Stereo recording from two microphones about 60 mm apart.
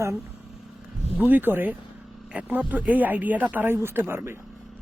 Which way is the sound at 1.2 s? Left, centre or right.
Right.